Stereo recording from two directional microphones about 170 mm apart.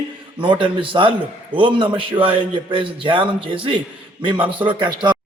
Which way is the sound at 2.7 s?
30° right (ahead or behind).